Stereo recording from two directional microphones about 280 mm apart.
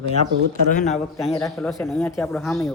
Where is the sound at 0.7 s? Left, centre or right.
Left.